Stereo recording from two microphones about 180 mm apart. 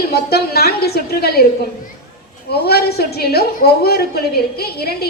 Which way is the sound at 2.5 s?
60° left (ahead or behind).